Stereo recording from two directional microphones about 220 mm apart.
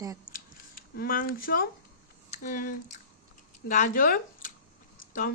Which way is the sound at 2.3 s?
35° left (ahead or behind).